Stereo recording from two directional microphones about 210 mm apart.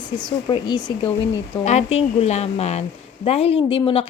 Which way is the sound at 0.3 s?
20° left (ahead or behind).